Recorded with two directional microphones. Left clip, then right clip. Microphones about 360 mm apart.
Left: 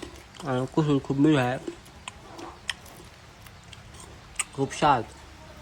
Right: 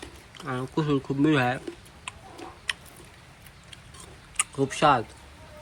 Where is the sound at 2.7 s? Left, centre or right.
Centre.